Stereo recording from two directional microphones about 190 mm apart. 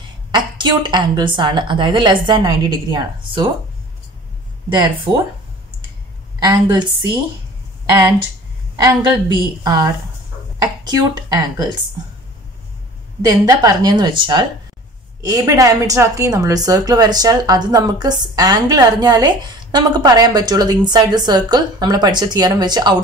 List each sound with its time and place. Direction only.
0.3 s a woman's voice: 25° right (ahead or behind)
4.7 s a woman's voice: 25° right (ahead or behind)
6.4 s a woman's voice: 20° right (ahead or behind)
7.9 s a woman's voice: 15° right (ahead or behind)
13.2 s a woman's voice: 20° right (ahead or behind)